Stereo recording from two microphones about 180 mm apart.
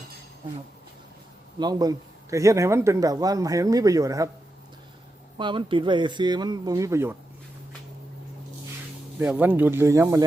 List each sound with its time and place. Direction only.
1.5 s a man's voice: 20° right (ahead or behind)
5.4 s a man's voice: 25° right (ahead or behind)
9.1 s speech: 10° right (ahead or behind)